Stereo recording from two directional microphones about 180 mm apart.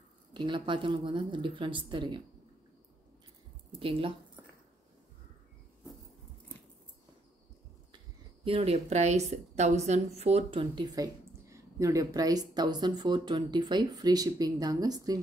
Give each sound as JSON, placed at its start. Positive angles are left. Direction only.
{"t": 0.3, "sound": "a woman's voice", "side_deg": -25}
{"t": 8.5, "sound": "a woman's voice", "side_deg": -35}